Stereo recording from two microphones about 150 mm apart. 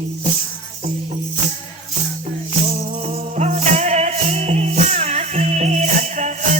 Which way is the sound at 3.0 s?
45° right (ahead or behind).